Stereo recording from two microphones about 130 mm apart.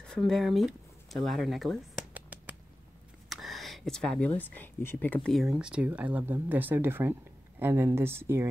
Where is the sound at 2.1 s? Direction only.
10° right (ahead or behind).